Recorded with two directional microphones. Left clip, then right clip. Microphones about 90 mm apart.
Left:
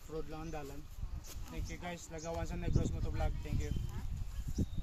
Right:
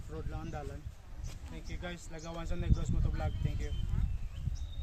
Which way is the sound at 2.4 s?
5° left (ahead or behind).